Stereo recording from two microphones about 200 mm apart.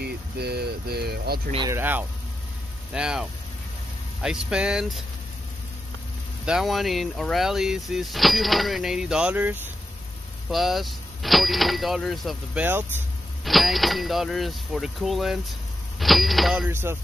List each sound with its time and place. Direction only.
0.0 s speech: 55° right (ahead or behind)
1.7 s speech: 10° right (ahead or behind)
6.4 s speech: centre (ahead or behind)